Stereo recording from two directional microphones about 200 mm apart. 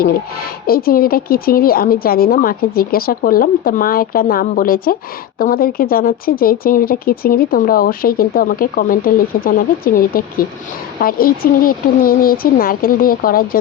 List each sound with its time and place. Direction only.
0.7 s speech: 50° left (ahead or behind)